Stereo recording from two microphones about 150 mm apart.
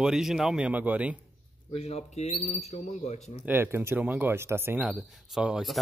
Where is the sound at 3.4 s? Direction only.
15° right (ahead or behind).